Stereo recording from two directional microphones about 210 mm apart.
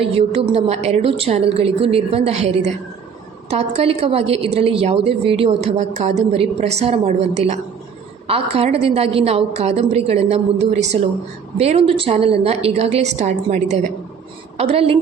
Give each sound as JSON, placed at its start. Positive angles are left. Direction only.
{"t": 0.0, "sound": "a woman's voice", "side_deg": -30}